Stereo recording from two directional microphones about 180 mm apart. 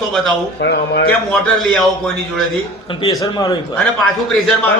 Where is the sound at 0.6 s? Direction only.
65° left (ahead or behind).